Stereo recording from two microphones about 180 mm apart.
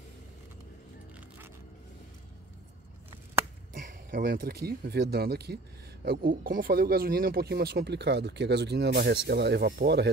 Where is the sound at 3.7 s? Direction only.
50° right (ahead or behind).